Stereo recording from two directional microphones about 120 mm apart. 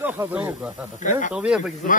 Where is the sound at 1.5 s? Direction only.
5° right (ahead or behind).